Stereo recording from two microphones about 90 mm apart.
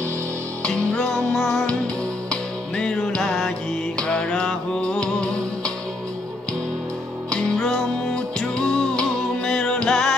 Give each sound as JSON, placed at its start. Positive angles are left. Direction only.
{"t": 0.7, "sound": "music", "side_deg": 5}
{"t": 2.8, "sound": "music", "side_deg": 10}
{"t": 7.2, "sound": "music", "side_deg": 5}